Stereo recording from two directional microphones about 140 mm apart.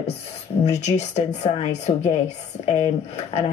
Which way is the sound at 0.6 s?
50° left (ahead or behind).